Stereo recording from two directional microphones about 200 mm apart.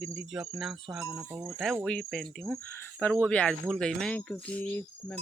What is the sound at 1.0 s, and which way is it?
Cricket, 10° right (ahead or behind).